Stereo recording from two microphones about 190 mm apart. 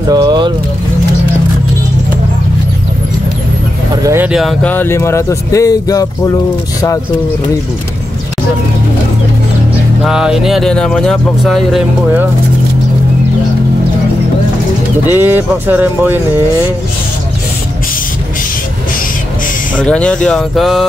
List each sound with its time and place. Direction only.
0.1 s speech: 20° right (ahead or behind)
3.9 s speech: 15° right (ahead or behind); by 6.3 s 20° left (ahead or behind)
10.0 s speech: 5° right (ahead or behind)
15.0 s speech: 10° right (ahead or behind)
19.8 s speech: 5° left (ahead or behind)